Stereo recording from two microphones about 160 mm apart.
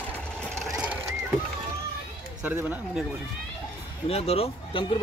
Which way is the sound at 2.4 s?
10° right (ahead or behind).